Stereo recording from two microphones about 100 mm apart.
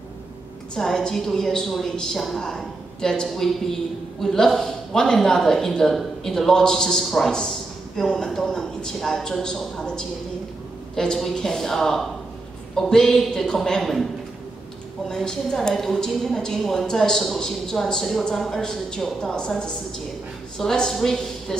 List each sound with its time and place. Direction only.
0.7 s speech: 5° left (ahead or behind)
15.0 s a woman's voice: 5° left (ahead or behind)